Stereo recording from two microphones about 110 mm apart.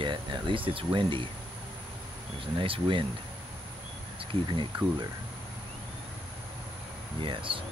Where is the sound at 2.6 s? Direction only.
55° right (ahead or behind).